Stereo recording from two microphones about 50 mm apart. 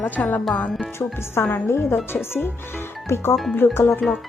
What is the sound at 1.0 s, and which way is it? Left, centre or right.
A woman's voice, left.